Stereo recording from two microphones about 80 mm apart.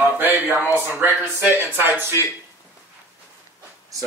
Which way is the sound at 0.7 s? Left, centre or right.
Right.